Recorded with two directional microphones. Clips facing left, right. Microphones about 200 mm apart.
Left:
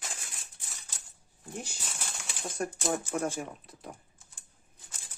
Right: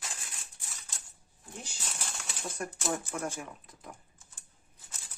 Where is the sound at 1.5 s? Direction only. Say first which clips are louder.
Left 6 dB; 55° left (ahead or behind).